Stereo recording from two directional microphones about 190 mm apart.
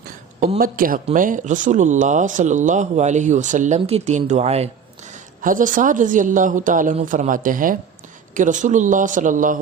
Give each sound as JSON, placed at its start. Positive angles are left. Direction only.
{"t": 0.3, "sound": "a woman's voice", "side_deg": -40}
{"t": 5.4, "sound": "a woman's voice", "side_deg": -45}